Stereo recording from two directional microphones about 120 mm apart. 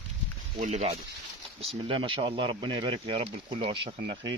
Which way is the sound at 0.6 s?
80° right.